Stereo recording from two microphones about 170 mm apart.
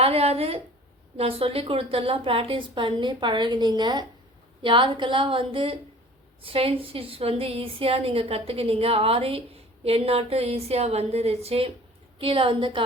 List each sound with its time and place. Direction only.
0.0 s a woman's voice: 35° right (ahead or behind)